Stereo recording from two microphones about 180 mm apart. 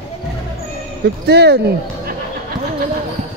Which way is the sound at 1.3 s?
65° right (ahead or behind).